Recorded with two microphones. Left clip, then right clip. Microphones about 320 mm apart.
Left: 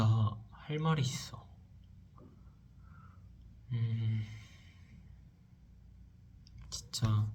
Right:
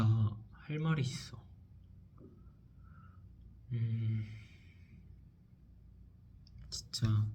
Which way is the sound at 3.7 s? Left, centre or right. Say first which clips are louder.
Left 1 dB; centre.